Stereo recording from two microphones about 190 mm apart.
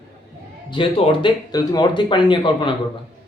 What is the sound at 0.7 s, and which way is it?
Speech, 30° left (ahead or behind).